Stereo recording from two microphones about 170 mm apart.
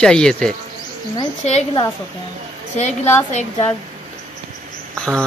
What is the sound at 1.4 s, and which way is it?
Speech, 40° left (ahead or behind).